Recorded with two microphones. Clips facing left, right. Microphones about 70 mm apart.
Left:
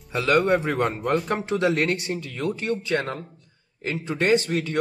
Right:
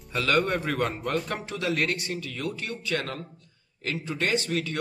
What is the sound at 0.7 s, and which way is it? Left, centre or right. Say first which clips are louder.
Speech: left 5 dB; centre.